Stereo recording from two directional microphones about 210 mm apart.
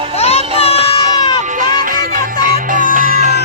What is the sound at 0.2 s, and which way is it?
Child singing, 30° left (ahead or behind).